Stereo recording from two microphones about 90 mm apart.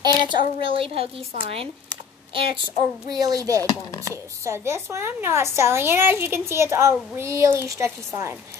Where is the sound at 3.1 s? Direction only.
45° right (ahead or behind).